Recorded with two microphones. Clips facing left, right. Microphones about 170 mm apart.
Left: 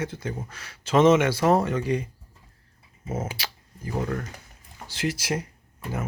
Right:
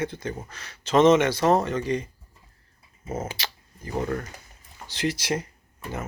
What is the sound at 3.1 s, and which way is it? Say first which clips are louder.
Speech: even; 10° left (ahead or behind).